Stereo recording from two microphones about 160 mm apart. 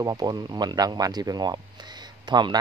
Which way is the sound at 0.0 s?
25° right (ahead or behind).